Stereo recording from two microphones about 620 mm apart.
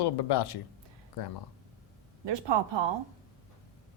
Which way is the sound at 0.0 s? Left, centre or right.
Left.